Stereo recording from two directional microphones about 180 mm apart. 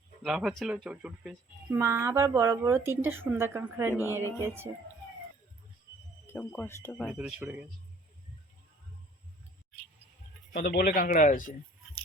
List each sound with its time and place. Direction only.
0.2 s speech: 5° right (ahead or behind)
1.7 s a woman's voice: 15° right (ahead or behind)
6.2 s speech: 10° left (ahead or behind)
7.1 s a woman's voice: 5° right (ahead or behind)
10.5 s speech: 60° left (ahead or behind)